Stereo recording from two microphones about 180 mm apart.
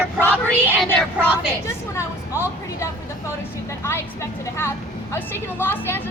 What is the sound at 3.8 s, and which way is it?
A woman's voice, 15° left (ahead or behind).